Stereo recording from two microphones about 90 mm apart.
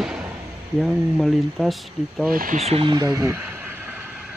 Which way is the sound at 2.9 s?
40° right (ahead or behind).